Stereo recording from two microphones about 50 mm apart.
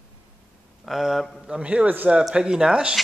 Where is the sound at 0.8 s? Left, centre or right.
Centre.